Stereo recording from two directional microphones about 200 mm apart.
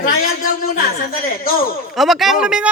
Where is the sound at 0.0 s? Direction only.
40° left (ahead or behind).